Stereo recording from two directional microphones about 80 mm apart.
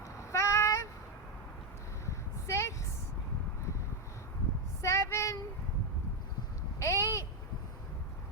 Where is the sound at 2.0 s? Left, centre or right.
Left.